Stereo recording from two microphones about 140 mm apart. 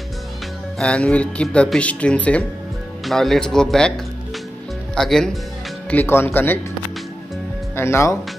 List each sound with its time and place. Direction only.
0.7 s speech: 5° left (ahead or behind)
5.9 s speech: 15° left (ahead or behind)
7.7 s speech: 20° left (ahead or behind)